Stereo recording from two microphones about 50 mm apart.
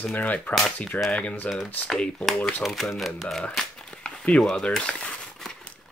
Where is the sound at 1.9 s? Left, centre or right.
Centre.